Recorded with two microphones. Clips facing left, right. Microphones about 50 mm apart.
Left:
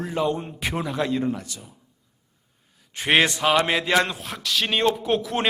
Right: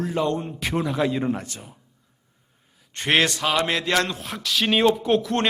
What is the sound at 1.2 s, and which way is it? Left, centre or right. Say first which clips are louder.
Speech: right 1 dB; right.